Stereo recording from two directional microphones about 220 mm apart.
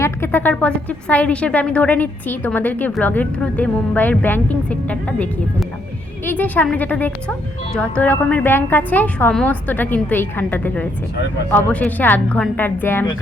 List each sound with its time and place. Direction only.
0.0 s a woman's voice: 10° left (ahead or behind)